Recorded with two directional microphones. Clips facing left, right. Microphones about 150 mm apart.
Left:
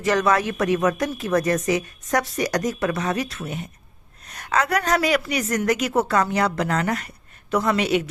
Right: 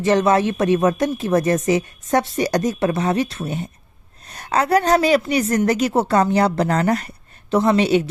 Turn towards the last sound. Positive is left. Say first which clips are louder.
# right 5 dB
turn(degrees=-30)  # may be behind; listen again after turning